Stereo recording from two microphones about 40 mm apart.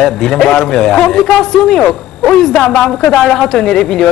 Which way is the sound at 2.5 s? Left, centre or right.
Left.